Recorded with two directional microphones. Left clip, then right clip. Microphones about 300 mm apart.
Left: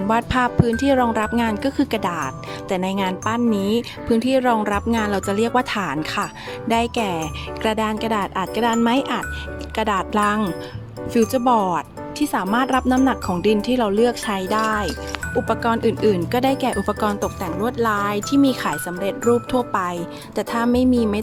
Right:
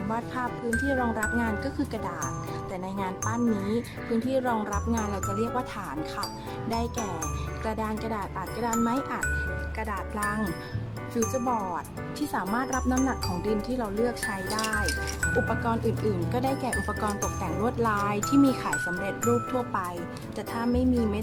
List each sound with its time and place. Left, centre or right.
0.1 s speech: left